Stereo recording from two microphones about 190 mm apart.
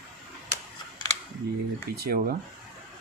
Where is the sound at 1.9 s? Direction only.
55° right (ahead or behind).